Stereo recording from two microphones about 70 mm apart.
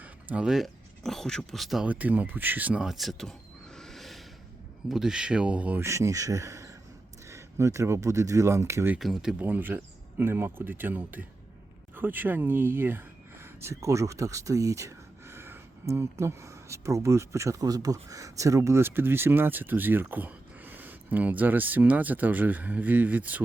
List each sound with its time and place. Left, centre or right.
0.0 s a sound: right
0.4 s speech: centre
1.0 s speech: centre
1.8 s speech: right
2.7 s speech: centre
3.8 s a sound: centre
4.9 s speech: centre
5.8 s speech: right
9.0 s speech: centre
9.4 s speech: right
17.7 s speech: right